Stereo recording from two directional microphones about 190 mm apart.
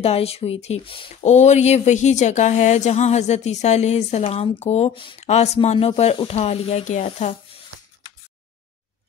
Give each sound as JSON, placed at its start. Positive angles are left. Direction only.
{"t": 0.0, "sound": "speech", "side_deg": 30}